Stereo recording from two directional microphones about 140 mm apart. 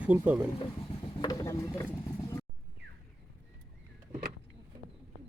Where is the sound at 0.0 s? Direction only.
10° right (ahead or behind).